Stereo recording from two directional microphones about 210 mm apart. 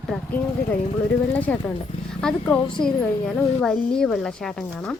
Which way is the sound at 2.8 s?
20° left (ahead or behind).